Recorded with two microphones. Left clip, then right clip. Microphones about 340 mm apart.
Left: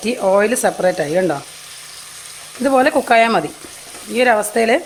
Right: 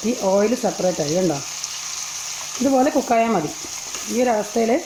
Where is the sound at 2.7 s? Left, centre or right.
Left.